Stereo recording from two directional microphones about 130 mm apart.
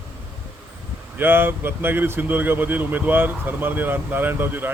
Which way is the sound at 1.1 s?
15° right (ahead or behind).